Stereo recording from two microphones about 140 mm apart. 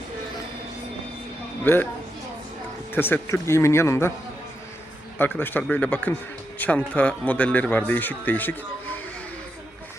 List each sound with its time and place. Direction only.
1.6 s speech: 15° left (ahead or behind)
2.9 s speech: 15° left (ahead or behind)
5.1 s speech: 15° left (ahead or behind)